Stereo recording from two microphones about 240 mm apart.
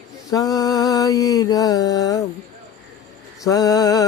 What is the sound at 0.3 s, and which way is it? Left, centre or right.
Mantra, centre.